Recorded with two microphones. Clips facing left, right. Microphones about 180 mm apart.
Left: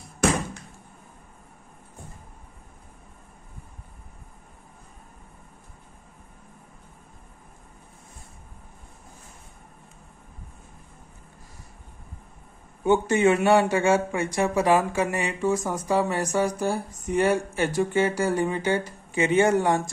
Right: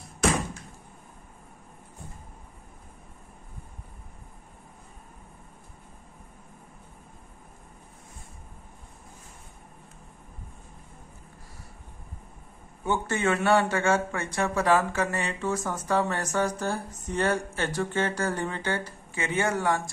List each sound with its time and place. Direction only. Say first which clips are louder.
12.8 s speech: left 7 dB; 15° left (ahead or behind)